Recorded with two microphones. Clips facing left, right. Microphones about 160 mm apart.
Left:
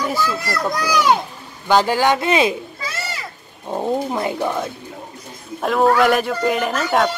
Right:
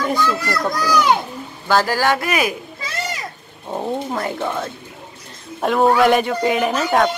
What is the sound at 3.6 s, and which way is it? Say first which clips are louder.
Speech: left 2 dB; 10° left (ahead or behind).